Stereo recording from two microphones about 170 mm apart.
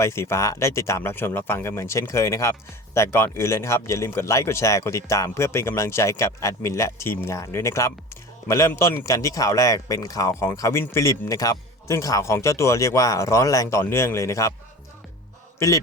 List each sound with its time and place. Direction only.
0.0 s speech: 15° left (ahead or behind)
15.5 s a man's voice: 15° left (ahead or behind)